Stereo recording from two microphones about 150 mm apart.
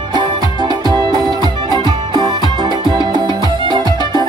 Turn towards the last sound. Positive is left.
turn(degrees=-30)  # may be behind; listen again after turning